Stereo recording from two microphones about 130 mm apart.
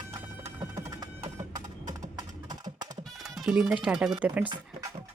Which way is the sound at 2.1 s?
30° right (ahead or behind).